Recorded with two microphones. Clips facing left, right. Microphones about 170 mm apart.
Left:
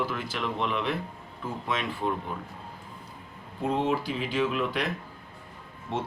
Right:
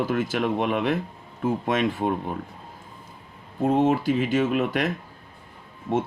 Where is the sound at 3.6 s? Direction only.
45° right (ahead or behind).